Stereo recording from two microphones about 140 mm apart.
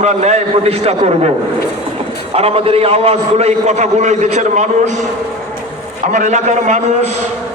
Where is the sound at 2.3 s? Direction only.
45° right (ahead or behind).